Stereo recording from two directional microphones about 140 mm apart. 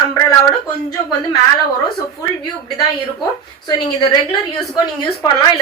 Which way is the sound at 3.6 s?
30° left (ahead or behind).